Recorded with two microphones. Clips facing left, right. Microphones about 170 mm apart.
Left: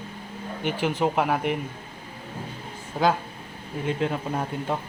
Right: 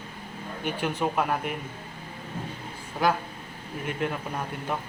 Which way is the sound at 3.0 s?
25° left (ahead or behind).